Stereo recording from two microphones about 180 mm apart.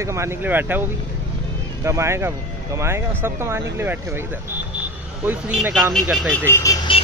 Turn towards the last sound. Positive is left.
turn(degrees=15)  # may be behind; listen again after turning